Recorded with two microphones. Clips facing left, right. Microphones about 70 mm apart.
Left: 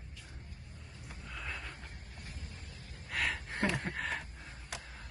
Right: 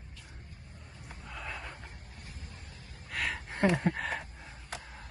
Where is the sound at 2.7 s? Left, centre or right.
Right.